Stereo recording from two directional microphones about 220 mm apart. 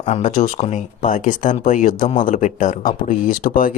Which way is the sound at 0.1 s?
35° left (ahead or behind).